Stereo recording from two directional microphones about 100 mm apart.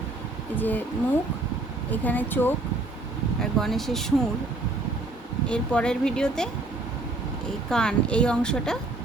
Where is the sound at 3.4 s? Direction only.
5° left (ahead or behind).